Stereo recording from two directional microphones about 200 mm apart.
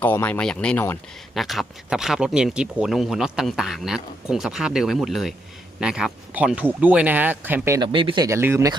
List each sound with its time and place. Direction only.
0.0 s speech: 10° left (ahead or behind); by 7.9 s 15° right (ahead or behind)
7.9 s speech: 25° right (ahead or behind)